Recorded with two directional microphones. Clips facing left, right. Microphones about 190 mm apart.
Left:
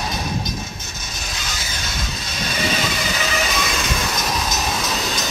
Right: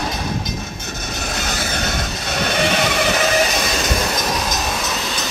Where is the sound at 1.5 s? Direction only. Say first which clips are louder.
Right 9 dB; 60° right (ahead or behind).